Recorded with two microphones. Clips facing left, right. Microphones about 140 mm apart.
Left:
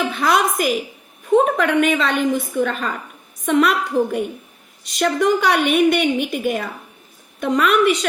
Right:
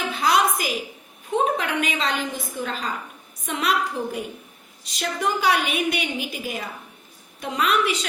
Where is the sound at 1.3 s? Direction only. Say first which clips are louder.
Left 7 dB; 50° left (ahead or behind).